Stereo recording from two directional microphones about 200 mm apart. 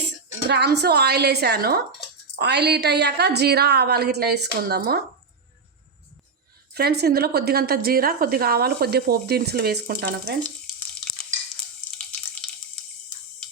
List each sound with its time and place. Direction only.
0.4 s a woman's voice: 55° right (ahead or behind)
6.7 s a woman's voice: 55° right (ahead or behind)